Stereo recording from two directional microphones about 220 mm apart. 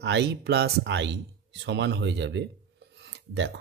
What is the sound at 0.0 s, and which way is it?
Speech, 50° right (ahead or behind).